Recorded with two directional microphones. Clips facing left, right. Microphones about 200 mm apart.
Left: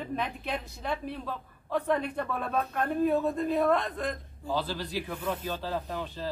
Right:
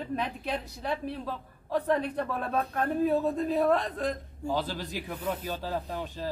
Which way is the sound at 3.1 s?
35° right (ahead or behind).